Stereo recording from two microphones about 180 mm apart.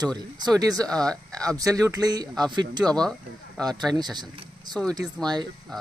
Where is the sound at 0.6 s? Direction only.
20° right (ahead or behind).